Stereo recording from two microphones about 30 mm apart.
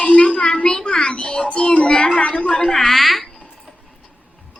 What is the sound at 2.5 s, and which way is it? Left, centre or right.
Speech, centre.